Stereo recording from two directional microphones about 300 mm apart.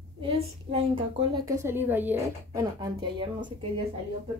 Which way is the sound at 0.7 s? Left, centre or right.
Centre.